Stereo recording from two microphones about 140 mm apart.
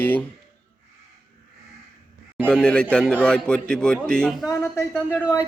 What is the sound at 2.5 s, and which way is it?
A man's voice, 5° left (ahead or behind).